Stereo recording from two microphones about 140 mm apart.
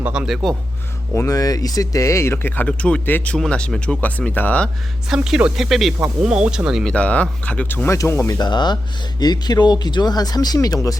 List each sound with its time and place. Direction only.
0.0 s speech: 5° right (ahead or behind)
1.1 s speech: 20° left (ahead or behind)
5.0 s speech: 5° right (ahead or behind)
6.9 s speech: 10° left (ahead or behind)
8.4 s speech: 30° left (ahead or behind)